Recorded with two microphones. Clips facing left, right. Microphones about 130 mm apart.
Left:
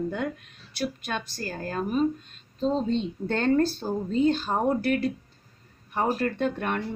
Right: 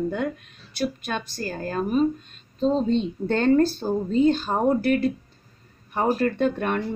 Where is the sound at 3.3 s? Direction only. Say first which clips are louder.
Right 4 dB; 20° right (ahead or behind).